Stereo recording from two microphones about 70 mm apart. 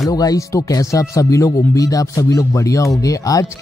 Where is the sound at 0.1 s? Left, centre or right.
Left.